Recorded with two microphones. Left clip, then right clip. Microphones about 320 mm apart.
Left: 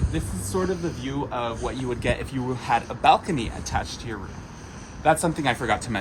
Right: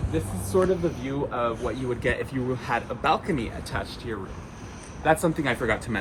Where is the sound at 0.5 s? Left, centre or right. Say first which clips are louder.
Right 4 dB; centre.